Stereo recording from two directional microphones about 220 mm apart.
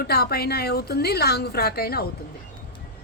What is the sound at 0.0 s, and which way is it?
Speech, 45° left (ahead or behind).